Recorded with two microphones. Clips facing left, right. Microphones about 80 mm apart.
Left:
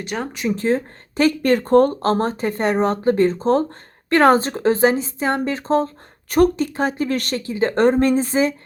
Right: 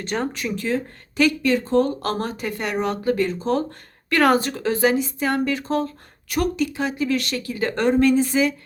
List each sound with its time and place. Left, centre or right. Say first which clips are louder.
0.0 s speech: right 1 dB; centre
0.3 s speech: left 5 dB; left
1.4 s speech: left 5 dB; left
2.0 s speech: left 6 dB; left
7.4 s speech: left 7 dB; left